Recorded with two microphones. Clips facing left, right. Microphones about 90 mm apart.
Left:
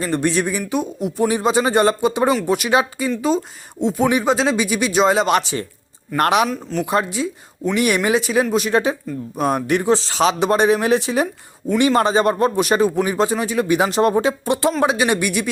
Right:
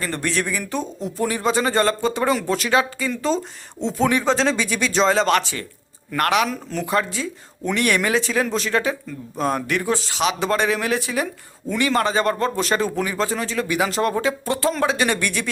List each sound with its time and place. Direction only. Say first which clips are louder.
0.0 s speech: left 5 dB; 20° left (ahead or behind)
6.5 s speech: left 4 dB; centre (ahead or behind)
6.8 s speech: left 2 dB; 20° left (ahead or behind); by 10.3 s 35° left (ahead or behind)
10.4 s speech: left 6 dB; 20° left (ahead or behind)